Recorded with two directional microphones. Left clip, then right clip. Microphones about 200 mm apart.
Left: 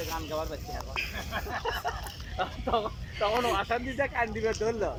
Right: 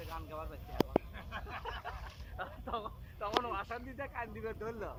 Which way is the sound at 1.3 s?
35° left (ahead or behind).